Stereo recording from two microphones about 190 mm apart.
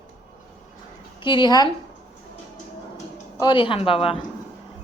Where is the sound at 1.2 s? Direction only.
25° left (ahead or behind).